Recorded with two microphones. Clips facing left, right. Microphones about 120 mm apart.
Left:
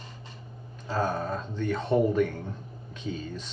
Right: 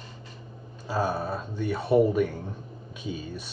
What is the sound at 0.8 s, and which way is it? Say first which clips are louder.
Speech: right 1 dB; 10° right (ahead or behind).